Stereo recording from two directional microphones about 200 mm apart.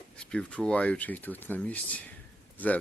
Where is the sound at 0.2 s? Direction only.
5° left (ahead or behind).